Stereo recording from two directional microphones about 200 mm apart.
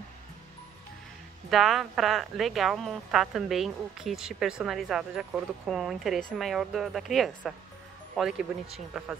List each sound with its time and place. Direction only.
1.5 s a woman's voice: centre (ahead or behind)